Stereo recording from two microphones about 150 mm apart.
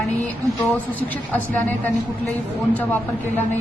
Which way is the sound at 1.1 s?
10° left (ahead or behind).